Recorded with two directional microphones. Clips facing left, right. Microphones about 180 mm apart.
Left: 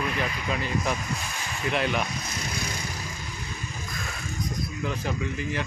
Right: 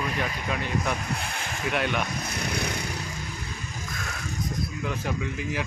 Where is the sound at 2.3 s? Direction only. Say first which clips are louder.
Right 3 dB; 65° right (ahead or behind).